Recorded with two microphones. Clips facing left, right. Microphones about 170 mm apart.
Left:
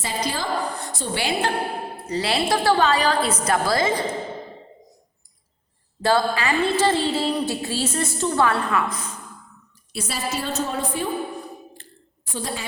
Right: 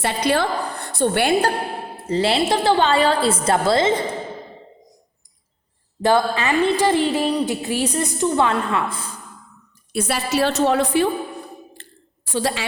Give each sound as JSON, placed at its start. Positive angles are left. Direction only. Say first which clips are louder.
{"t": 0.0, "sound": "a woman's voice", "louder": "right 7 dB", "side_deg": -65}
{"t": 2.0, "sound": "a woman's voice", "louder": "right 4 dB", "side_deg": -30}
{"t": 6.0, "sound": "a woman's voice", "louder": "right 3 dB", "side_deg": -20}
{"t": 9.9, "sound": "a woman's voice", "louder": "right 6 dB", "side_deg": -60}
{"t": 11.8, "sound": "a sound", "louder": "right 1 dB", "side_deg": -85}